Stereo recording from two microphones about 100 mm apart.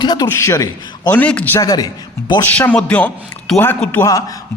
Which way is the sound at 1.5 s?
40° left (ahead or behind).